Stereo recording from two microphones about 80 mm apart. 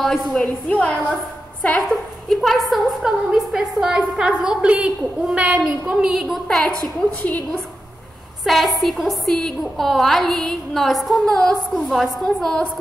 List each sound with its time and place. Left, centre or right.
0.3 s a woman's voice: centre
1.9 s a woman's voice: centre
6.4 s a woman's voice: centre
8.5 s a woman's voice: centre